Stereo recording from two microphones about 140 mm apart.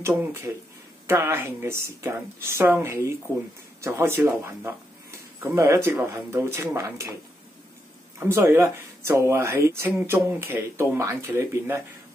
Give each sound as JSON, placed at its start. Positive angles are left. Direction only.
{"t": 1.0, "sound": "speech", "side_deg": -15}
{"t": 8.2, "sound": "speech", "side_deg": -15}